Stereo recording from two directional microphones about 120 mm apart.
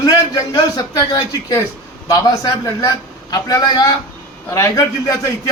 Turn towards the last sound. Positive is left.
turn(degrees=25)  # may be behind; listen again after turning